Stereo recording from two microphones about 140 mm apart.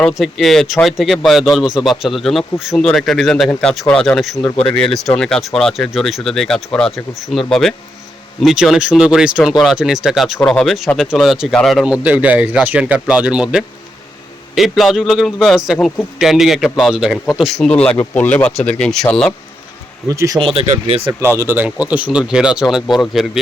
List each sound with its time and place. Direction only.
0.1 s speech: centre (ahead or behind)
12.0 s speech: 10° right (ahead or behind)
20.1 s speech: 25° right (ahead or behind)
20.4 s speech: 40° right (ahead or behind)
21.1 s speech: 20° right (ahead or behind); by 23.4 s centre (ahead or behind)